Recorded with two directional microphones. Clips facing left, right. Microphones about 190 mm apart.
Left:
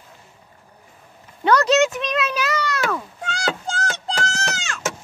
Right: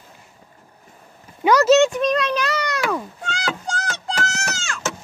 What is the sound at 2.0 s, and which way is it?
Speech, centre (ahead or behind).